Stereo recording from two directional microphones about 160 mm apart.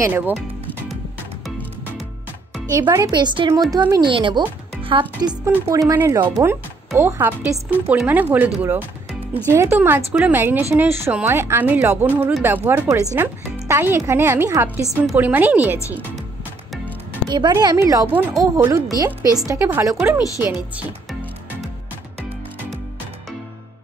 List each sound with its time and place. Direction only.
0.0 s speech: 10° right (ahead or behind)
2.8 s speech: 25° right (ahead or behind)
5.4 s speech: 20° right (ahead or behind)
17.3 s speech: 25° right (ahead or behind)
20.7 s music: centre (ahead or behind)